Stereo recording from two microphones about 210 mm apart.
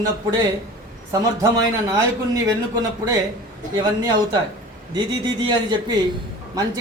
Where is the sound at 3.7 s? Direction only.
20° right (ahead or behind).